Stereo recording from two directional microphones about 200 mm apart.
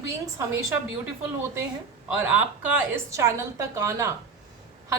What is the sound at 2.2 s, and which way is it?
A woman's voice, 10° right (ahead or behind).